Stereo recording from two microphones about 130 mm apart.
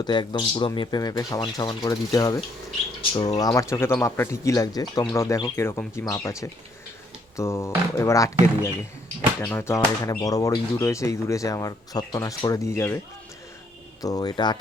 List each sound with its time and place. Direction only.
0.0 s speech: 35° left (ahead or behind)
14.0 s speech: 30° left (ahead or behind)